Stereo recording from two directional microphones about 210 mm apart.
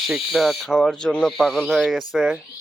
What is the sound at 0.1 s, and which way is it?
Speech, centre (ahead or behind).